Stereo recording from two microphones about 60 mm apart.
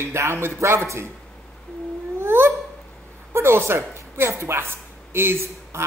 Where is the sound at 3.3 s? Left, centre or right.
Right.